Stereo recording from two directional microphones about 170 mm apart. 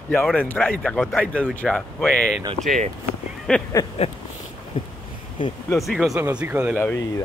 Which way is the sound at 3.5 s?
5° left (ahead or behind).